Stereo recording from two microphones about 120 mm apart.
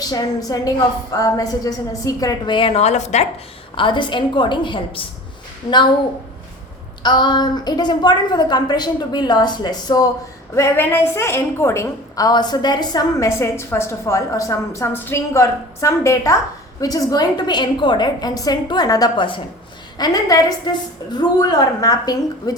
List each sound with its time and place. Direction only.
0.0 s a woman's voice: 35° left (ahead or behind)
2.6 s a woman's voice: 55° left (ahead or behind); by 3.2 s 70° left (ahead or behind)
3.8 s a woman's voice: 40° left (ahead or behind)
7.0 s a woman's voice: 40° left (ahead or behind)
10.5 s a woman's voice: 20° left (ahead or behind)